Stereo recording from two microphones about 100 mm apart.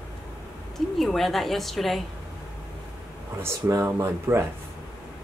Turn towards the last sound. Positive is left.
turn(degrees=-25)  # may be behind; listen again after turning